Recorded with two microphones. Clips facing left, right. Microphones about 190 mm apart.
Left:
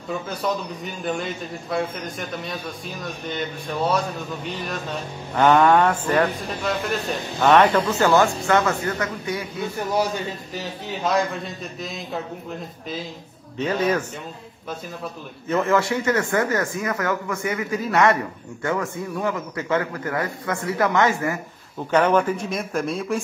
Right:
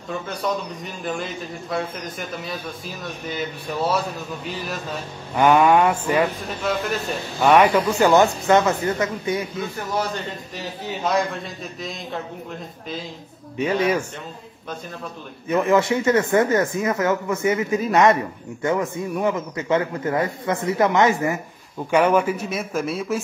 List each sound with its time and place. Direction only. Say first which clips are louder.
0.1 s a man's voice: even; centre (ahead or behind)
7.8 s speech: right 2 dB; 20° right (ahead or behind)
9.8 s speech: left 4 dB; 10° left (ahead or behind)
10.5 s a man's voice: even; centre (ahead or behind)
13.6 s speech: right 1 dB; 10° right (ahead or behind)
15.4 s speech: right 2 dB; 15° right (ahead or behind)
21.9 s a man's voice: right 1 dB; 10° right (ahead or behind)